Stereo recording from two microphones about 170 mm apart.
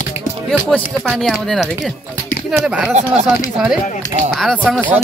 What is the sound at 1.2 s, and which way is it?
Speech, centre (ahead or behind).